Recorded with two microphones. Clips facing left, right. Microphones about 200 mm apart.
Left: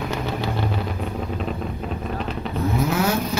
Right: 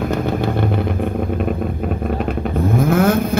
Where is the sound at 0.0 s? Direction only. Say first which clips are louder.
Right 7 dB; 50° right (ahead or behind).